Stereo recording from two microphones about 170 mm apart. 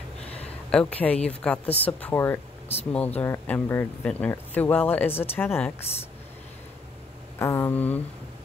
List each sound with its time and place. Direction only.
0.2 s a sound: 35° left (ahead or behind)
0.7 s speech: 5° left (ahead or behind)
7.3 s speech: 15° left (ahead or behind)